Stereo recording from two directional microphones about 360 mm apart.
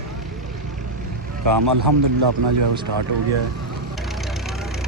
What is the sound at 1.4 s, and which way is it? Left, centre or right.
Speech, right.